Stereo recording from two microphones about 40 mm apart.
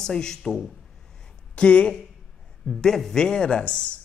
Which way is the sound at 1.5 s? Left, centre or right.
Left.